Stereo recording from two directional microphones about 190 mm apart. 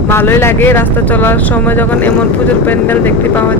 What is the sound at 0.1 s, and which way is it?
Speech, 10° left (ahead or behind).